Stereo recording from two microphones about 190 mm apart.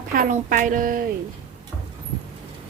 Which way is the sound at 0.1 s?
45° right (ahead or behind).